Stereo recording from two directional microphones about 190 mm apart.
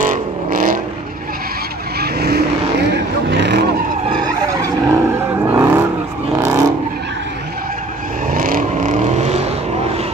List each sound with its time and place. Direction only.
0.0 s vehicle: 45° right (ahead or behind)
2.0 s vehicle: 55° right (ahead or behind)
4.6 s vehicle: 15° right (ahead or behind)
8.3 s vehicle: 45° right (ahead or behind)